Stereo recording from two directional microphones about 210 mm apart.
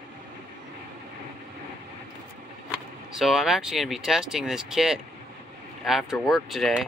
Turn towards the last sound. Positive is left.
turn(degrees=0)  # may be behind; listen again after turning